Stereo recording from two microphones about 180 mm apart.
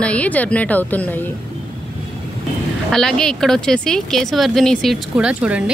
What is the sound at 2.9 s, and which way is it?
A man's voice, centre (ahead or behind).